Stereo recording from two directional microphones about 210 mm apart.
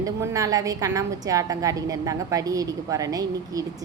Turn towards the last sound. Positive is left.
turn(degrees=-15)  # may be behind; listen again after turning